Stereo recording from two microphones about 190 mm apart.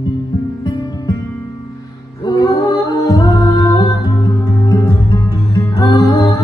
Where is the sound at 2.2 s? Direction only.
20° left (ahead or behind).